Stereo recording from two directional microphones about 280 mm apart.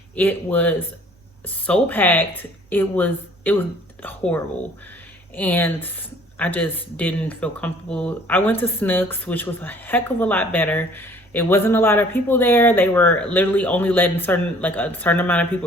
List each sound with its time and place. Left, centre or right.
0.2 s speech: centre